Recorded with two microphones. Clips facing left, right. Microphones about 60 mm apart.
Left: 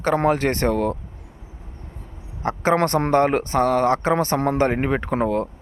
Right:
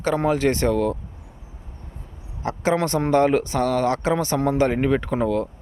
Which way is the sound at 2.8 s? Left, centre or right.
Left.